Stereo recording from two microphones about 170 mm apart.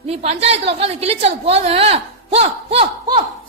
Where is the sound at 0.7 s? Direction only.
35° right (ahead or behind).